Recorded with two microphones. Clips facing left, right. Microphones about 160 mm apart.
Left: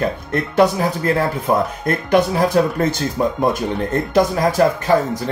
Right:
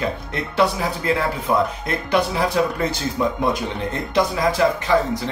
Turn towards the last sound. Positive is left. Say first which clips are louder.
# left 3 dB
turn(degrees=45)  # may be behind; listen again after turning